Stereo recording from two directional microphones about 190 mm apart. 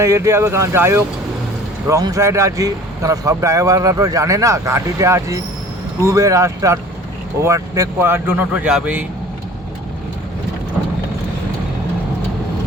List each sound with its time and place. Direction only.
0.0 s speech: 15° right (ahead or behind)